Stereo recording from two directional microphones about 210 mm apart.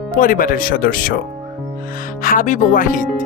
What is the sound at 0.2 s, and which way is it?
Speech, 40° left (ahead or behind).